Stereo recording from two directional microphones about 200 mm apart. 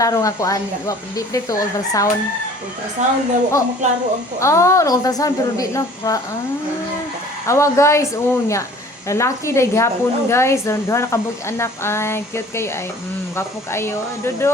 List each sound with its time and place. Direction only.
0.0 s a woman's voice: 15° left (ahead or behind)
3.0 s a child's voice: 35° right (ahead or behind)
4.4 s a woman's voice: 15° left (ahead or behind)
7.4 s a woman's voice: 15° left (ahead or behind)